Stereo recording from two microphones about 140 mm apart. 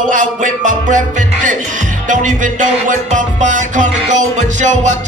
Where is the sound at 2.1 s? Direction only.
65° right (ahead or behind).